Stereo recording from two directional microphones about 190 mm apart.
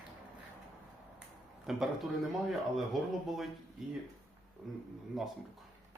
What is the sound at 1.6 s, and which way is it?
Speech, centre (ahead or behind).